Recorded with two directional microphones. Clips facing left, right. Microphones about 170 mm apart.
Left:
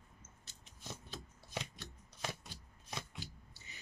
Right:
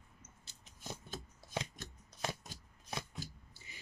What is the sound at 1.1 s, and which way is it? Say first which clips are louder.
Shuffling cards: right 4 dB; 45° right (ahead or behind).